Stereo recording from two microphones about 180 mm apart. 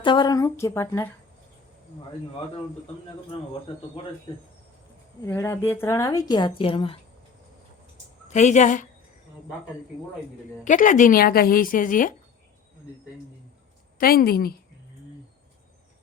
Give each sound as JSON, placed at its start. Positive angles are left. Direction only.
{"t": 0.0, "sound": "speech", "side_deg": 25}
{"t": 5.2, "sound": "a woman's voice", "side_deg": 15}
{"t": 8.3, "sound": "speech", "side_deg": 40}
{"t": 10.6, "sound": "a woman's voice", "side_deg": 45}
{"t": 14.0, "sound": "a woman's voice", "side_deg": 55}